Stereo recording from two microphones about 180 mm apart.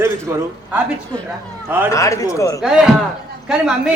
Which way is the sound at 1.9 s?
15° left (ahead or behind).